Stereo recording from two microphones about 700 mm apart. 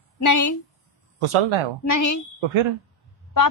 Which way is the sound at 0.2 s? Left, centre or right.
Left.